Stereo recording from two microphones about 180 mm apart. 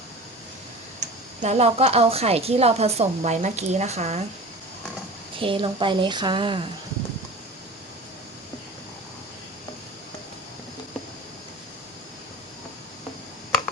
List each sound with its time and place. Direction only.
0.9 s a woman's voice: 40° right (ahead or behind)
5.4 s a woman's voice: 30° right (ahead or behind)